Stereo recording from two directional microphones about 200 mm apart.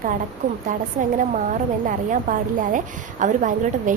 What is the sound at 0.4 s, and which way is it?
A woman's voice, 40° right (ahead or behind).